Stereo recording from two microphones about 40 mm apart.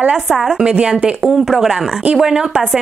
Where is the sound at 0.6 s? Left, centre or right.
Right.